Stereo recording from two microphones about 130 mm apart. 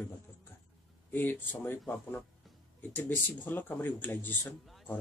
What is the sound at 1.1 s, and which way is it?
Speech, 15° left (ahead or behind).